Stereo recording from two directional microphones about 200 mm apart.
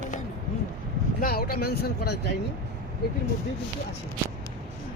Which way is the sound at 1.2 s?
50° left (ahead or behind).